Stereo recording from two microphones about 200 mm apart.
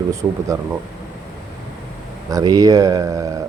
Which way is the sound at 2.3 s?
20° right (ahead or behind).